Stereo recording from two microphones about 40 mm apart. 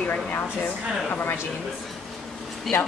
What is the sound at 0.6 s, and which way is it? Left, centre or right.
Speech, left.